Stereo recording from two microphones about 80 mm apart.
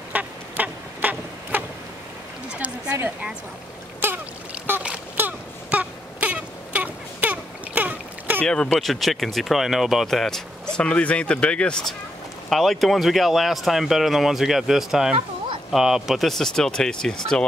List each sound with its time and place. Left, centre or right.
0.1 s a sound: centre
2.5 s a woman's voice: centre
4.0 s trickle: right
4.7 s a sound: right
8.4 s speech: centre
8.9 s speech: centre
12.4 s speech: centre